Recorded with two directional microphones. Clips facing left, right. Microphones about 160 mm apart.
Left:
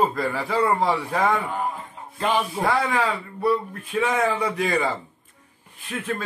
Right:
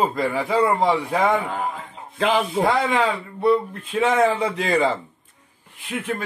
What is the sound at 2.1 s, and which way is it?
Speech, 90° right.